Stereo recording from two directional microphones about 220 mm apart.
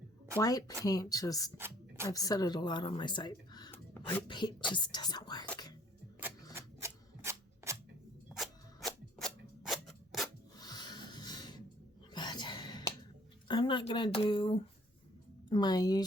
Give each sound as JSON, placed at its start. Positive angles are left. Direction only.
{"t": 0.3, "sound": "a woman's voice", "side_deg": 15}
{"t": 1.5, "sound": "a sound", "side_deg": -10}
{"t": 2.0, "sound": "speech", "side_deg": 15}
{"t": 6.5, "sound": "scissors", "side_deg": -10}
{"t": 8.3, "sound": "scissors", "side_deg": 0}
{"t": 10.6, "sound": "rub", "side_deg": 20}
{"t": 12.1, "sound": "whispering", "side_deg": 20}
{"t": 13.5, "sound": "a woman's voice", "side_deg": 20}